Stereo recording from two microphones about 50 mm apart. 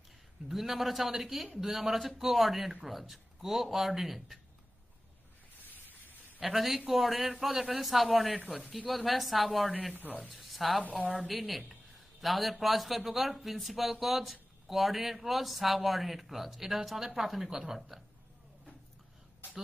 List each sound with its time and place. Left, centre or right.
0.5 s a man's voice: centre
5.7 s a sound: left
6.4 s a man's voice: centre
10.8 s a woman's voice: right
11.1 s a man's voice: centre